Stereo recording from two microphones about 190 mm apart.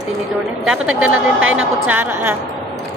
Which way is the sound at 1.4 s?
90° right.